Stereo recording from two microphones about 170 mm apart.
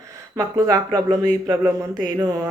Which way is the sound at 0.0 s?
20° right (ahead or behind).